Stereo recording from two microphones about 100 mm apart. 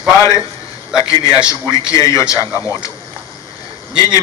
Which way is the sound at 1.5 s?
35° left (ahead or behind).